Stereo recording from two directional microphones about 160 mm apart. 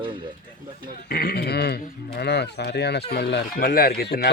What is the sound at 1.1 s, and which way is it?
Speech, 70° left (ahead or behind).